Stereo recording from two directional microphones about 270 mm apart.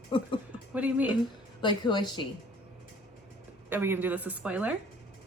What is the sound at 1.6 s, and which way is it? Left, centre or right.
Speech, centre.